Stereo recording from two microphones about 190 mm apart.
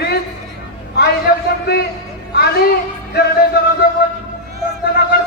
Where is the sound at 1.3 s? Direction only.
50° left (ahead or behind).